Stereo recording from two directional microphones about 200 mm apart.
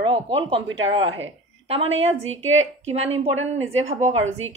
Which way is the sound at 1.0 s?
75° right (ahead or behind).